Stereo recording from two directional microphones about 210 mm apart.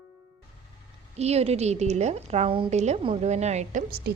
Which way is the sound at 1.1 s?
30° right (ahead or behind).